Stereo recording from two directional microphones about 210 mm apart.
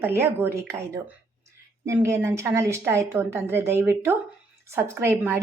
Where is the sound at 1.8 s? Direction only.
15° right (ahead or behind).